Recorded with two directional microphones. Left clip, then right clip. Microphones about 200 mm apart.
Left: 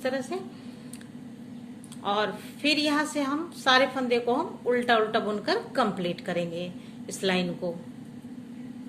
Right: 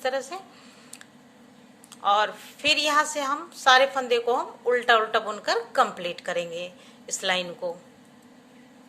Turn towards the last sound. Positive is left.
turn(degrees=-30)  # may be behind; listen again after turning